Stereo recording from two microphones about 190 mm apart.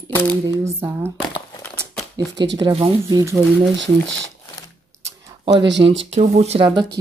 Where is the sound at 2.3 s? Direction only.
70° right (ahead or behind).